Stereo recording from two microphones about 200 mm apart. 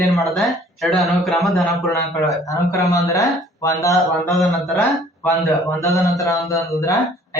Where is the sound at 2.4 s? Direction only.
15° left (ahead or behind).